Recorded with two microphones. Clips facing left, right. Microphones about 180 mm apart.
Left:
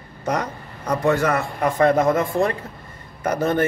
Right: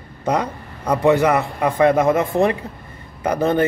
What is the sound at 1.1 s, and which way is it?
A man's voice, 15° right (ahead or behind).